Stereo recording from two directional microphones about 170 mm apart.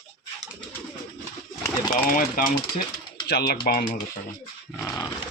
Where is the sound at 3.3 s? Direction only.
65° left (ahead or behind).